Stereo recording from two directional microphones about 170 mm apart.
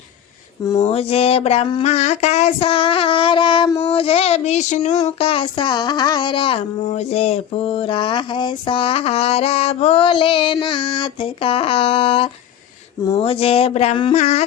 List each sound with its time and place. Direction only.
0.8 s speech: 35° left (ahead or behind)